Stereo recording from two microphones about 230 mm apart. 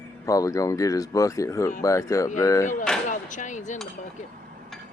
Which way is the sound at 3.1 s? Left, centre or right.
Left.